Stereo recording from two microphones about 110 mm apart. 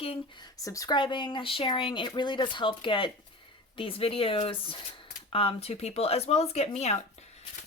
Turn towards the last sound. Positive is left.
turn(degrees=75)  # may be behind; listen again after turning